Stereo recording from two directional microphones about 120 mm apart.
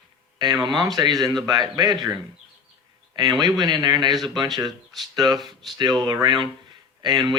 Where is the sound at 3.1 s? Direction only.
30° right (ahead or behind).